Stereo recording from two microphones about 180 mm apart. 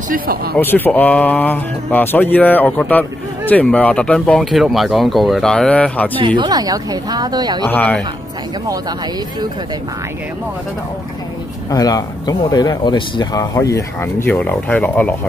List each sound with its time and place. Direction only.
0.1 s speech: 55° right (ahead or behind)
0.6 s speech: 10° left (ahead or behind)
6.1 s speech: 25° right (ahead or behind)
7.6 s speech: 10° left (ahead or behind)
11.7 s speech: 20° left (ahead or behind)